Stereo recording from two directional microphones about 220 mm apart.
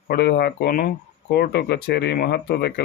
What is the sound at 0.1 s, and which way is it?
Speech, 45° left (ahead or behind).